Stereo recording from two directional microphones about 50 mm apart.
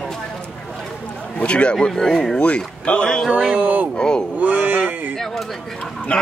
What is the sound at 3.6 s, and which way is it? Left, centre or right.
Speech, right.